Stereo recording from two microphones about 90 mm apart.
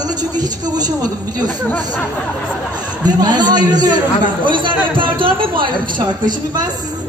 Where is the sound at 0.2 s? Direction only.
45° right (ahead or behind).